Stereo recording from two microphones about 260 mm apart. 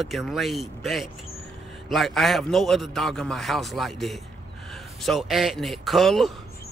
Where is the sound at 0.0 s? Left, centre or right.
Centre.